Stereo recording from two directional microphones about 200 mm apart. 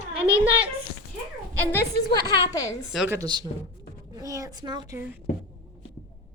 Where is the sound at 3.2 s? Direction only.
20° right (ahead or behind).